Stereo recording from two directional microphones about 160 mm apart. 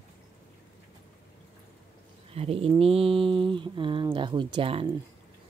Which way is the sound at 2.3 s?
35° right (ahead or behind).